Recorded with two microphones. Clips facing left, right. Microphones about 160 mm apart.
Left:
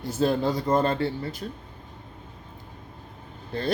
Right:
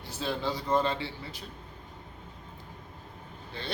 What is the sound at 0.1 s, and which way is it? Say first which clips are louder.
Speech: left 9 dB; 45° left (ahead or behind).